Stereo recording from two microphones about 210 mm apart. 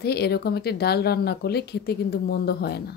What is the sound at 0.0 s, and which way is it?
A woman's voice, 50° left (ahead or behind).